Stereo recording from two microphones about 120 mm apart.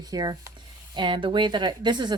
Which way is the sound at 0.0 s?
35° right (ahead or behind).